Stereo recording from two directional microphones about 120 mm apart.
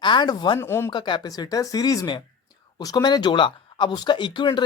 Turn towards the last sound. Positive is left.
turn(degrees=40)  # may be behind; listen again after turning